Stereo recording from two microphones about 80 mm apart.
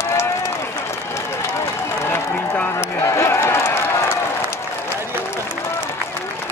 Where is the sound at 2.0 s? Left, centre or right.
Left.